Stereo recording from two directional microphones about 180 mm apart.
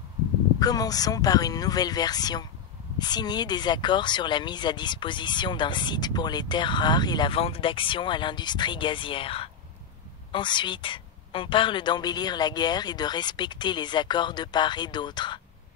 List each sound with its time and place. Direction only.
0.6 s speech: 20° left (ahead or behind)